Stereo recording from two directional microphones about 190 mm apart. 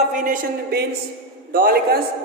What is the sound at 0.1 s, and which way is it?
A man's voice, 45° right (ahead or behind).